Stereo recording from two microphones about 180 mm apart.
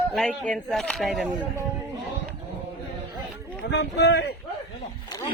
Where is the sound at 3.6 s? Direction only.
70° left (ahead or behind).